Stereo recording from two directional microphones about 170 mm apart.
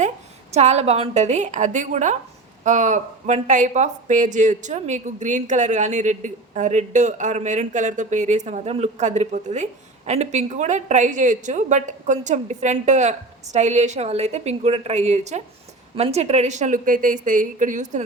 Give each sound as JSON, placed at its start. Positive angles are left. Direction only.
{"t": 0.5, "sound": "speech", "side_deg": -40}